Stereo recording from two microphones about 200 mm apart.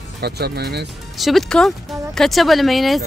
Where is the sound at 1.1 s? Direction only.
Centre (ahead or behind).